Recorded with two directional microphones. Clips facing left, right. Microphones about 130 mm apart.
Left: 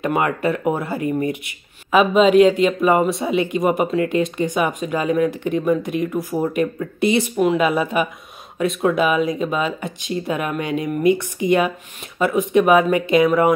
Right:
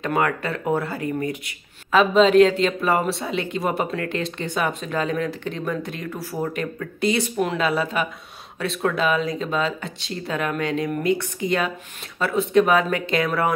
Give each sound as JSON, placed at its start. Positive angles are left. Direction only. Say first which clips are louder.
{"t": 0.0, "sound": "speech", "louder": "left 3 dB", "side_deg": 15}
{"t": 7.3, "sound": "speech", "louder": "left 6 dB", "side_deg": 5}
{"t": 7.6, "sound": "speech", "louder": "left 4 dB", "side_deg": 15}